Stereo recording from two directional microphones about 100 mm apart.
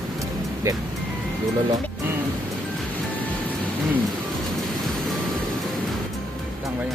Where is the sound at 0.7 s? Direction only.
35° right (ahead or behind).